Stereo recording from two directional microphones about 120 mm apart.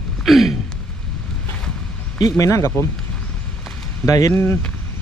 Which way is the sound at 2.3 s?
25° left (ahead or behind).